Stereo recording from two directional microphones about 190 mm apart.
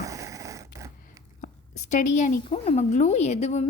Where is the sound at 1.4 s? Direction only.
40° left (ahead or behind).